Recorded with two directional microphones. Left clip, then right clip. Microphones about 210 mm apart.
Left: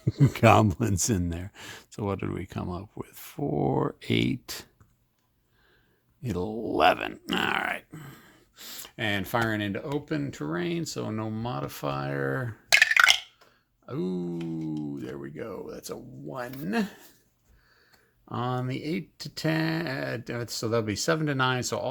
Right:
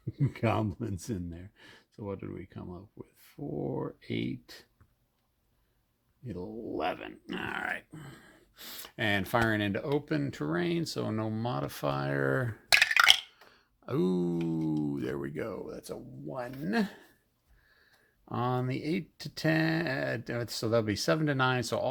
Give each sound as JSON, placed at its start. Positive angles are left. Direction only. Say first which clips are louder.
{"t": 0.0, "sound": "speech", "louder": "left 11 dB", "side_deg": 50}
{"t": 6.2, "sound": "speech", "louder": "left 8 dB", "side_deg": 40}
{"t": 7.7, "sound": "grunt", "louder": "left 3 dB", "side_deg": 20}
{"t": 7.9, "sound": "speech", "louder": "left 3 dB", "side_deg": 5}
{"t": 13.8, "sound": "a sound", "louder": "right 2 dB", "side_deg": -25}
{"t": 15.5, "sound": "speech", "louder": "left 2 dB", "side_deg": 0}
{"t": 18.3, "sound": "speech", "louder": "left 1 dB", "side_deg": 0}